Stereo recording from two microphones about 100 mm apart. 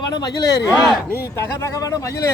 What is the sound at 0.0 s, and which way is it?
Speech, 45° left (ahead or behind).